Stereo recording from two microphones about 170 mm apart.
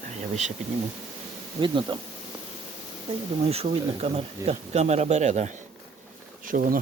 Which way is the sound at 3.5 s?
35° right (ahead or behind).